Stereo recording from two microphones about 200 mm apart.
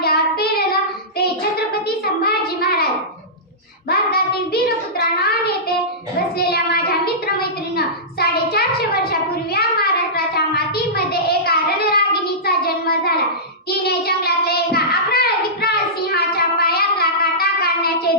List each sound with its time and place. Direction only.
0.0 s child singing: 50° left (ahead or behind)
2.2 s child singing: 50° left (ahead or behind)
3.8 s child singing: 50° left (ahead or behind)
6.4 s child singing: 50° left (ahead or behind)
10.3 s a sound: 50° left (ahead or behind)
13.7 s child singing: 50° left (ahead or behind)